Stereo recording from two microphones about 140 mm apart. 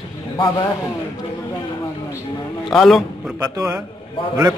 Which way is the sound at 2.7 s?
Centre (ahead or behind).